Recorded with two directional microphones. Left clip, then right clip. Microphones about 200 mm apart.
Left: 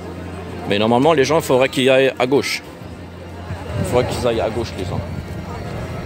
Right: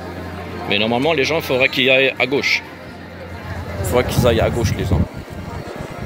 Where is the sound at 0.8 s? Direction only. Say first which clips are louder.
Left 4 dB; 30° left (ahead or behind).